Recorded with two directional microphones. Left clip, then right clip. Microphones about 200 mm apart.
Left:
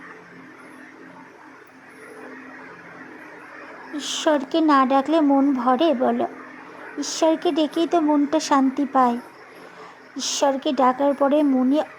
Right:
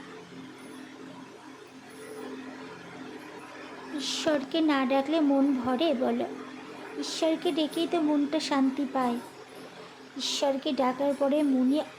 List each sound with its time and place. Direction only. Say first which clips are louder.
3.9 s speech: left 7 dB; 20° left (ahead or behind)
10.2 s speech: left 7 dB; 25° left (ahead or behind)